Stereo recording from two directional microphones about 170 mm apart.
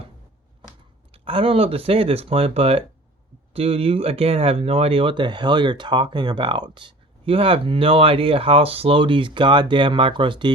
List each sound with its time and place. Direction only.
1.1 s speech: 30° right (ahead or behind)